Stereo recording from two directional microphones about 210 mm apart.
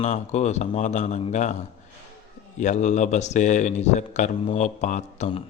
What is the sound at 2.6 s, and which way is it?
Speech, 35° left (ahead or behind).